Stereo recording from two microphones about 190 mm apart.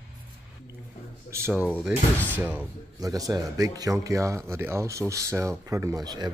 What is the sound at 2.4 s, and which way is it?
Speech, 10° right (ahead or behind).